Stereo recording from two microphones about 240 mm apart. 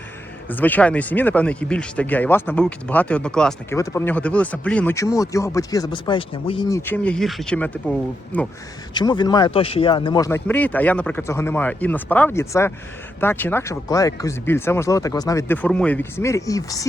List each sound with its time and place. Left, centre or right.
0.4 s speech: centre
9.0 s speech: centre